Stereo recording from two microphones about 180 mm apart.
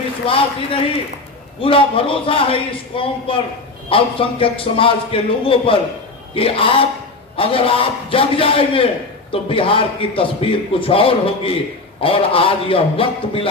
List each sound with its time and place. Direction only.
0.3 s a man's voice: 30° left (ahead or behind)